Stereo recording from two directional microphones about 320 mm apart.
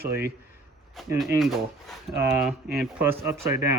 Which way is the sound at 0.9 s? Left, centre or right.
Centre.